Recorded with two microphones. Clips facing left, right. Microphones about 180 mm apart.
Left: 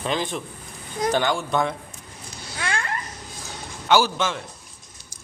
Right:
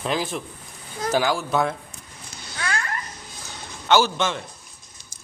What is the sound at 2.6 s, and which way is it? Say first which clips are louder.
Babbling: even; 25° left (ahead or behind).